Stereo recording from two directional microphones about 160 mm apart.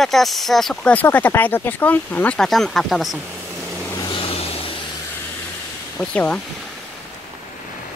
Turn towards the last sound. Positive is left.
turn(degrees=10)  # may be behind; listen again after turning